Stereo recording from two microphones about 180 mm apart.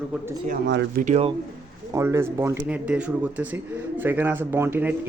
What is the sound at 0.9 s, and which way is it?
Speech, 50° right (ahead or behind).